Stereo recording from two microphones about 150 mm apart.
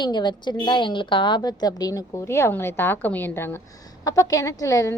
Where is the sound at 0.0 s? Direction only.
30° left (ahead or behind).